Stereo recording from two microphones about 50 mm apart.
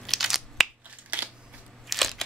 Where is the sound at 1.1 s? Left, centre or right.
Right.